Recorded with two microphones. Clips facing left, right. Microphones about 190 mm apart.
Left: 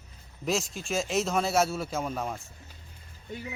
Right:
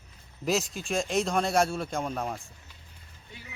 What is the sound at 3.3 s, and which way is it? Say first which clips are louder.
Speech: left 11 dB; 45° left (ahead or behind).